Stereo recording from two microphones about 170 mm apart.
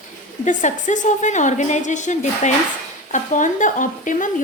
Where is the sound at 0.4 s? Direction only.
45° left (ahead or behind).